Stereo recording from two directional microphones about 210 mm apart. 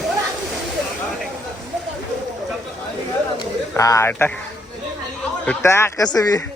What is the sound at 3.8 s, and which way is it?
Speech, 15° left (ahead or behind).